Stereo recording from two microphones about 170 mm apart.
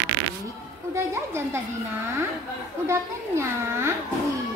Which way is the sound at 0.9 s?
15° right (ahead or behind).